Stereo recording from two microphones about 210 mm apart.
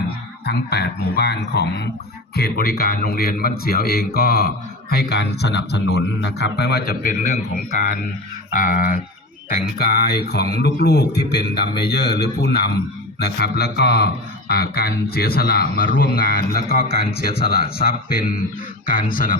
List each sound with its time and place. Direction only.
0.4 s a man's voice: 50° left (ahead or behind)